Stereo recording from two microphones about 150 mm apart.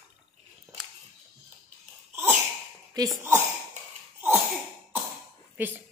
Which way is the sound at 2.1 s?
15° right (ahead or behind).